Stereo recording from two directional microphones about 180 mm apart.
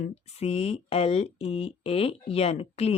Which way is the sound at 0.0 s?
35° left (ahead or behind).